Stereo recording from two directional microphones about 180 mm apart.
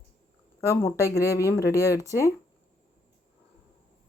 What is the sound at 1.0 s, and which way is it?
Speech, 15° left (ahead or behind).